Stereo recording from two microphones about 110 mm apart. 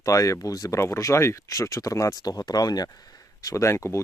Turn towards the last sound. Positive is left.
turn(degrees=25)  # may be behind; listen again after turning